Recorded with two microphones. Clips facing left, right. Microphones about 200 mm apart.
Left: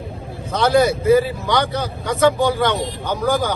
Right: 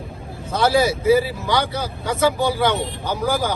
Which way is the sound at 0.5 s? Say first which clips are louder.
Left 2 dB; centre (ahead or behind).